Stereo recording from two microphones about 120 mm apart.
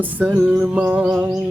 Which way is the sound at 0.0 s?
15° right (ahead or behind).